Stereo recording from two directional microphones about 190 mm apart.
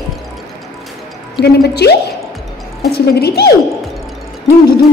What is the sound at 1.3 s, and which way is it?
A woman's voice, 60° left (ahead or behind).